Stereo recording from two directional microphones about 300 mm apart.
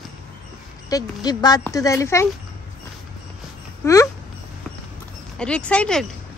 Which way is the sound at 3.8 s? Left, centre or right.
Centre.